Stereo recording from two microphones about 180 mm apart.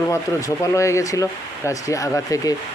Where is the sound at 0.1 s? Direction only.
15° left (ahead or behind).